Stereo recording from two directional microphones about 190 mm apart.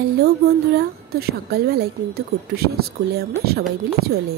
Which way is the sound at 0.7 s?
55° right (ahead or behind).